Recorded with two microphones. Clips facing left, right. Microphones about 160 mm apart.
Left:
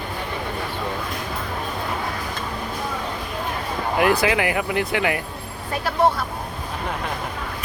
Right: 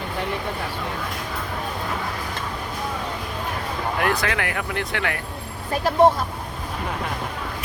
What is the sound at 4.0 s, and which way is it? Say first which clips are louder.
Speech: left 6 dB; 5° left (ahead or behind).